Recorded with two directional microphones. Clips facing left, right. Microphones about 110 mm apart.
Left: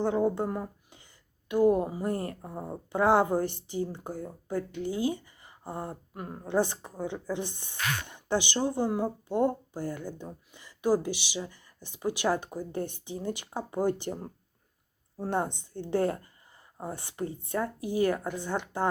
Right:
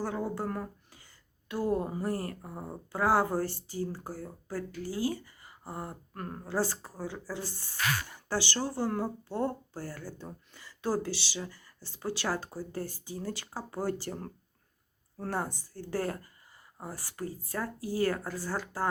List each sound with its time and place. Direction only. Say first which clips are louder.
0.0 s speech: left 7 dB; 20° left (ahead or behind)
6.1 s speech: left 4 dB; 10° left (ahead or behind)